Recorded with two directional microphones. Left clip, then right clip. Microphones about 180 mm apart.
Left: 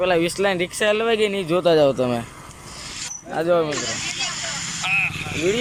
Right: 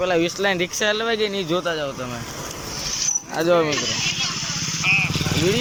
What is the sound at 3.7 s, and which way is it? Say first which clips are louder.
Vehicle: right 3 dB; 35° left (ahead or behind).